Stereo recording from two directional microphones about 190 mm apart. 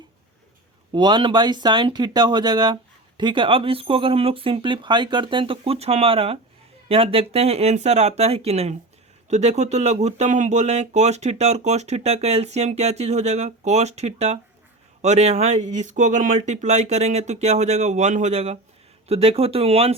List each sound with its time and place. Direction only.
0.9 s speech: 25° right (ahead or behind)